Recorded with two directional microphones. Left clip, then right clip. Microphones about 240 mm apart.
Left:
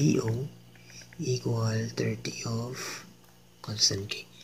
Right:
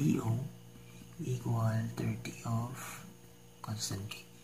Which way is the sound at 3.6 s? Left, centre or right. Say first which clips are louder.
Left 14 dB; centre.